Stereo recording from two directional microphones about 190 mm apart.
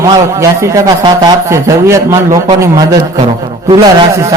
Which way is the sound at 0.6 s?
20° right (ahead or behind).